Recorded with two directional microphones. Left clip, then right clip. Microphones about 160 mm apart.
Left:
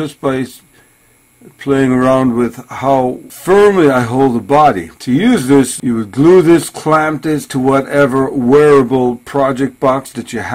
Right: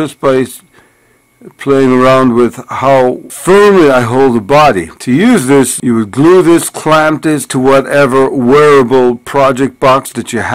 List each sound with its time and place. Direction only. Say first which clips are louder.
0.0 s speech: right 7 dB; 25° right (ahead or behind)
1.6 s a man's voice: right 5 dB; 30° right (ahead or behind)
8.8 s speech: right 6 dB; 30° right (ahead or behind)